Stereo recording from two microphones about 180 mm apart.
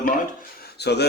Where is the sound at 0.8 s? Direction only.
65° left (ahead or behind).